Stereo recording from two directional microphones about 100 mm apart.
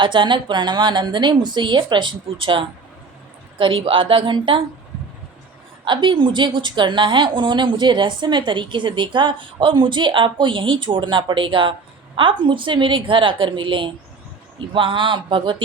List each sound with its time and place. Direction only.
0.0 s a woman's voice: 55° right (ahead or behind)
5.8 s a woman's voice: 55° right (ahead or behind)